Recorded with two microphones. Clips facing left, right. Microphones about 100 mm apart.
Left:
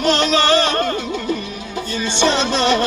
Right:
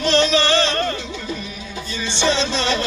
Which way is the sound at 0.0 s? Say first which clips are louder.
Left 1 dB; 50° left (ahead or behind).